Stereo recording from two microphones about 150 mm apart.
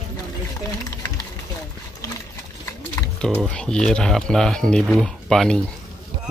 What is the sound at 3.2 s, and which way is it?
Speech, 5° left (ahead or behind).